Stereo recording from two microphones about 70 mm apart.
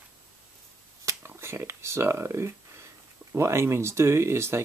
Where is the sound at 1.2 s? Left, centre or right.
Right.